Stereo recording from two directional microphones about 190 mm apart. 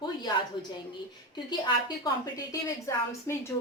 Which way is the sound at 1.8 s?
20° left (ahead or behind).